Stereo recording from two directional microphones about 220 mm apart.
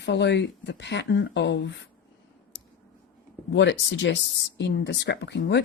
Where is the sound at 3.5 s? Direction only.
55° left (ahead or behind).